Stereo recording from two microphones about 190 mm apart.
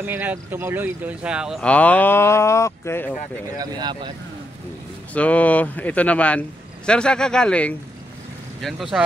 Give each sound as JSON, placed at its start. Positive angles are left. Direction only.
{"t": 0.0, "sound": "speech", "side_deg": -10}
{"t": 3.5, "sound": "speech", "side_deg": -20}
{"t": 5.1, "sound": "speech", "side_deg": 5}